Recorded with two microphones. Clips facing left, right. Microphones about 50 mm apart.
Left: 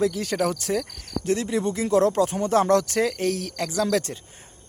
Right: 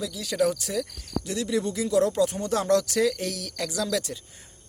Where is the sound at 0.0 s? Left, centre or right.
Left.